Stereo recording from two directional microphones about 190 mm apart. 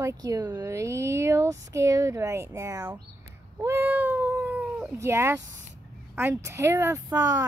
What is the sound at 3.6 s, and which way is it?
Cat, 10° right (ahead or behind).